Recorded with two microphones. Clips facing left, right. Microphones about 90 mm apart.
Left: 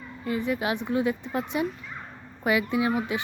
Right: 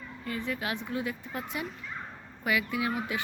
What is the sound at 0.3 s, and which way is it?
Speech, 15° left (ahead or behind).